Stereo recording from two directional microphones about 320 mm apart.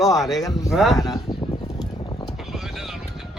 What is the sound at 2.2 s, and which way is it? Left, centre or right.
Music, centre.